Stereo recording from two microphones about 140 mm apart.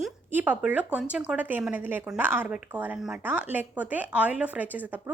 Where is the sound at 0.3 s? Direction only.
10° right (ahead or behind).